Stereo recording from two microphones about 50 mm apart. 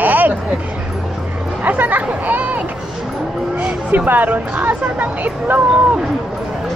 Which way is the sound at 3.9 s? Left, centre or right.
Right.